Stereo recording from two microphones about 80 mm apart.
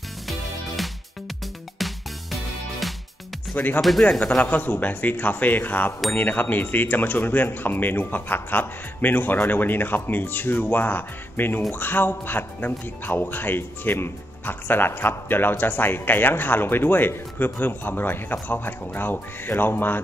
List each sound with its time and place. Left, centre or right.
1.8 s music: centre
3.5 s a man's voice: left
4.0 s speech: centre
4.4 s a man's voice: left